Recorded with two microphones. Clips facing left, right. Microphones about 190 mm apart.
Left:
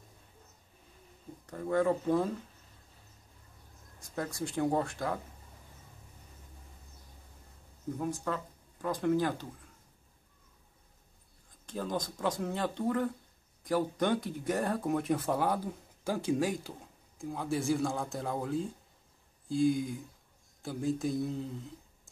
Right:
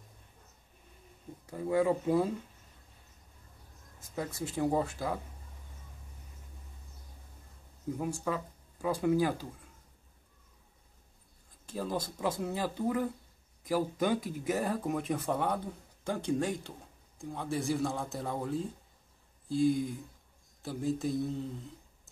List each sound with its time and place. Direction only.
1.4 s speech: 10° right (ahead or behind)
4.1 s speech: 5° right (ahead or behind)
8.0 s speech: 10° right (ahead or behind)
11.6 s speech: 5° right (ahead or behind)